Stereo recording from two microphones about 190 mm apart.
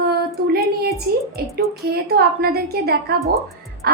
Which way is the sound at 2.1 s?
55° right (ahead or behind).